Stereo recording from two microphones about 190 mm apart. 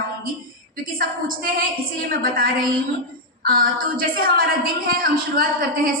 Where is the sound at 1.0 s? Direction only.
50° right (ahead or behind).